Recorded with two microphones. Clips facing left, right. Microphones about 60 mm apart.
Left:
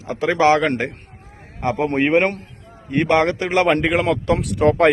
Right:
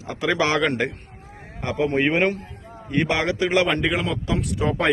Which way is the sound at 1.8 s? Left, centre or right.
Left.